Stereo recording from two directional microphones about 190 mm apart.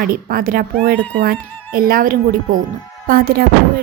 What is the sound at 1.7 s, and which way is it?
A woman's voice, 50° right (ahead or behind).